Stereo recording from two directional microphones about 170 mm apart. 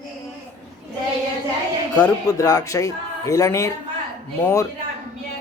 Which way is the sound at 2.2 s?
20° left (ahead or behind).